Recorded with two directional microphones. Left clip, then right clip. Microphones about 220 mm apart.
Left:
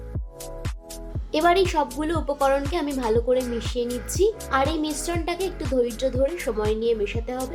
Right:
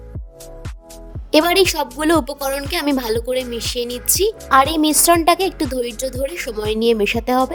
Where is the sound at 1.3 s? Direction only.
50° right (ahead or behind).